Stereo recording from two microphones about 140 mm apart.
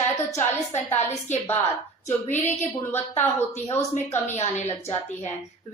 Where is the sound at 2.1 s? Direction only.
15° left (ahead or behind).